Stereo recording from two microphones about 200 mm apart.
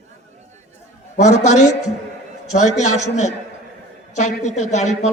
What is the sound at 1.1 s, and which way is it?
A man's voice, 35° left (ahead or behind).